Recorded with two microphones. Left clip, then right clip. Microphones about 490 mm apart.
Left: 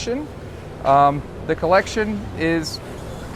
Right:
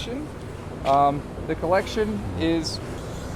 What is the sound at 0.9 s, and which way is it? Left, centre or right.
Speech, left.